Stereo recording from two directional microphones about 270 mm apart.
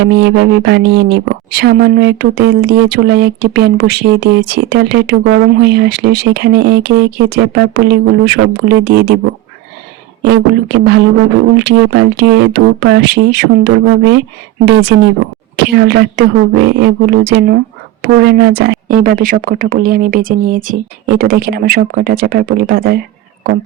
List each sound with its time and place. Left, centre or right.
0.0 s speech: right
10.2 s speech: right